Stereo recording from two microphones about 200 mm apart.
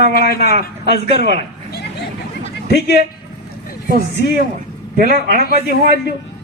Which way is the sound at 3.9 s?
50° right (ahead or behind).